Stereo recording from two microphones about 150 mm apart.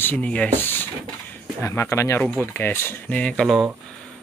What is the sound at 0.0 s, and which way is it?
Speech, 10° left (ahead or behind).